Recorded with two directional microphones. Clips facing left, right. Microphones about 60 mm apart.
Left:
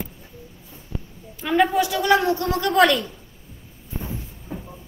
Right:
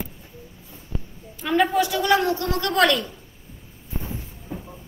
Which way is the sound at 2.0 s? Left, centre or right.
Left.